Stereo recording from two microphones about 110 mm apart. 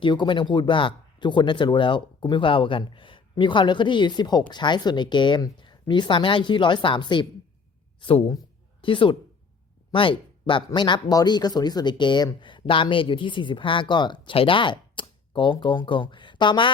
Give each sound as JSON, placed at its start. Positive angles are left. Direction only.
{"t": 0.0, "sound": "a woman's voice", "side_deg": 45}